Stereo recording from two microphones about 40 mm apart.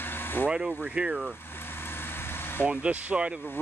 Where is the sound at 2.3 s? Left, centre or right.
Left.